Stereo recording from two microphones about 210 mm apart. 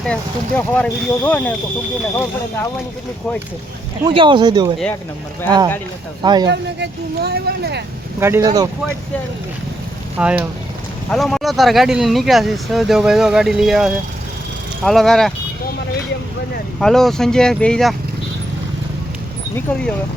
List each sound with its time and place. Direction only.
0.0 s speech: 5° left (ahead or behind)
4.0 s speech: 25° right (ahead or behind)
6.5 s speech: 55° right (ahead or behind)
8.2 s speech: 15° right (ahead or behind)
10.2 s speech: 5° right (ahead or behind)
16.8 s speech: centre (ahead or behind)